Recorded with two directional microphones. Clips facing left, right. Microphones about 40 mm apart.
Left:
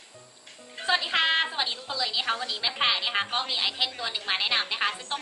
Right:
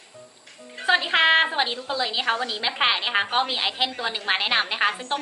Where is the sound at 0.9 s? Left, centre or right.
Right.